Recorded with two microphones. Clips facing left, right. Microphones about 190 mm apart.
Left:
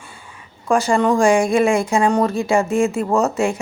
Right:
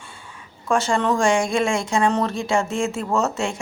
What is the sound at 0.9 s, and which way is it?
A man's voice, 10° left (ahead or behind).